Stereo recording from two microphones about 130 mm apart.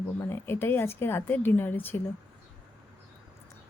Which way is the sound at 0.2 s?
15° left (ahead or behind).